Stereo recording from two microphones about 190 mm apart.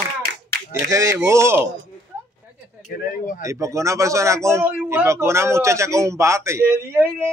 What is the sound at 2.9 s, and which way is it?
Speech, 45° left (ahead or behind).